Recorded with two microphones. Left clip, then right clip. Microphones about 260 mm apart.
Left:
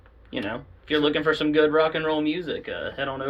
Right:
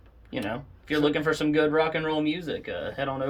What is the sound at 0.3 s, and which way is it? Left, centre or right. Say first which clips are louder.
Speech: left 1 dB; right.